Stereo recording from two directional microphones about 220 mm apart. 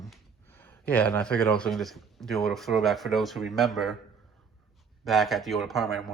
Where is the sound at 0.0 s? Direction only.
5° left (ahead or behind).